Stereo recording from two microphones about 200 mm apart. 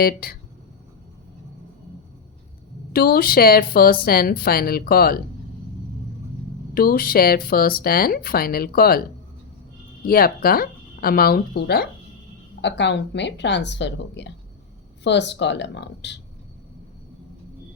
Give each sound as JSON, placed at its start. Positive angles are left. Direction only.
{"t": 0.0, "sound": "speech", "side_deg": 50}
{"t": 2.9, "sound": "speech", "side_deg": 50}
{"t": 6.7, "sound": "speech", "side_deg": 45}
{"t": 10.1, "sound": "a woman's voice", "side_deg": 50}